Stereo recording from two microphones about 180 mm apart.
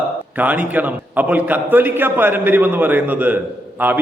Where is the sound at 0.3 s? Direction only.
10° right (ahead or behind).